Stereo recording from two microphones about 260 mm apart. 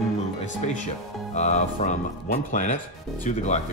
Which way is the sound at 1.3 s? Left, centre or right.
Left.